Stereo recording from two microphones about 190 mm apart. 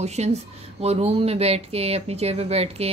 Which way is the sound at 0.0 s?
35° right (ahead or behind).